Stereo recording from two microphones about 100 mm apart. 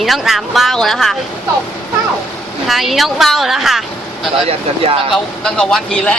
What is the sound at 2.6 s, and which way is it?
Speech, centre (ahead or behind).